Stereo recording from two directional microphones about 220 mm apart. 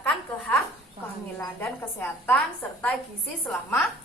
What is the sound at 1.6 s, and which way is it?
Speech, 5° left (ahead or behind).